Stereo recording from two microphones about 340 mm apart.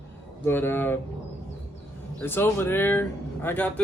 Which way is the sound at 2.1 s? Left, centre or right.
Centre.